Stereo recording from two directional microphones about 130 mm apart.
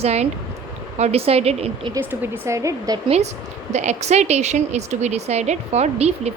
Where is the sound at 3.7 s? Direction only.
60° right (ahead or behind).